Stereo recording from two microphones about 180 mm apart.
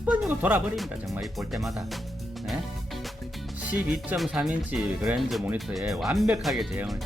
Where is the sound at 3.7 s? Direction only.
10° right (ahead or behind).